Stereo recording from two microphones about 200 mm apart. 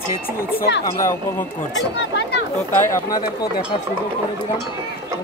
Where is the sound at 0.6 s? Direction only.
60° left (ahead or behind).